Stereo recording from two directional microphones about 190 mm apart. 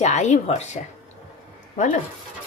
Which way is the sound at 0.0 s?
40° left (ahead or behind).